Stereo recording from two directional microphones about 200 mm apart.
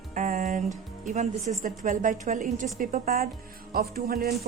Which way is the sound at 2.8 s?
40° right (ahead or behind).